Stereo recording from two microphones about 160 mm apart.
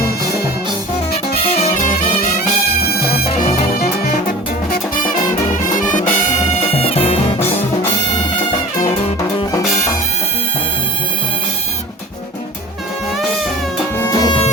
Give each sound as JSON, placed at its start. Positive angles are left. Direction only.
{"t": 1.4, "sound": "music", "side_deg": 40}
{"t": 2.9, "sound": "music", "side_deg": 75}
{"t": 5.8, "sound": "music", "side_deg": 55}
{"t": 6.7, "sound": "music", "side_deg": 35}
{"t": 13.9, "sound": "music", "side_deg": 15}